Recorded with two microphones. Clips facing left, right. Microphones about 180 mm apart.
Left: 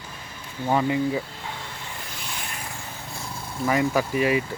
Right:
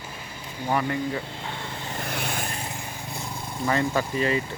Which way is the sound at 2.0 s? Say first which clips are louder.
Right 7 dB; 60° right (ahead or behind).